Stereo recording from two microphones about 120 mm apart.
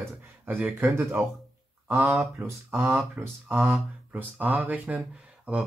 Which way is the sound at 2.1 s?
5° right (ahead or behind).